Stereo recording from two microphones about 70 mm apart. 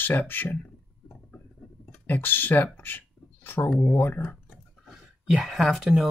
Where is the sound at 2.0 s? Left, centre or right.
Left.